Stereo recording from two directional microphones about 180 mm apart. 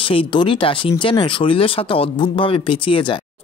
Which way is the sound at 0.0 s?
30° left (ahead or behind).